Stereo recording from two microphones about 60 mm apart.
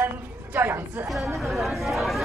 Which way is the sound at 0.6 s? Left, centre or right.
Right.